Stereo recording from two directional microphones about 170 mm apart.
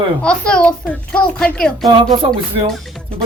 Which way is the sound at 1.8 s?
25° right (ahead or behind).